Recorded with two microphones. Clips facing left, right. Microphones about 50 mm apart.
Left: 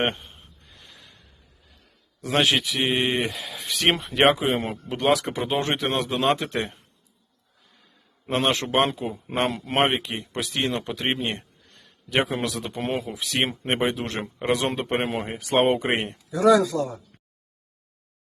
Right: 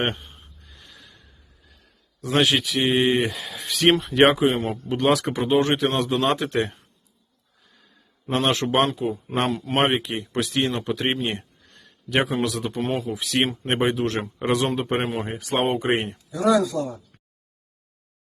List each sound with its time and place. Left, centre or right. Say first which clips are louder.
0.0 s a sound: even; centre
2.2 s speech: right 1 dB; centre
8.3 s a man's voice: right 1 dB; centre
16.3 s speech: left 2 dB; left